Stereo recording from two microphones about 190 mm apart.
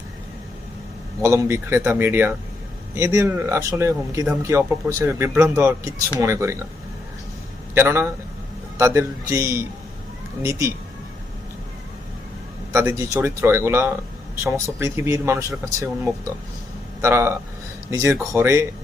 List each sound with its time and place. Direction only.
1.2 s speech: 15° right (ahead or behind)
7.7 s speech: 10° right (ahead or behind)
12.7 s speech: 15° right (ahead or behind)